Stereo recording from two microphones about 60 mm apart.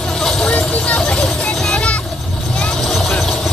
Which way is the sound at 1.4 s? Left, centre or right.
Centre.